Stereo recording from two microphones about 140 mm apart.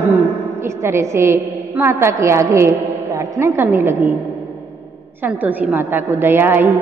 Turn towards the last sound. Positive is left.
turn(degrees=-15)  # may be behind; listen again after turning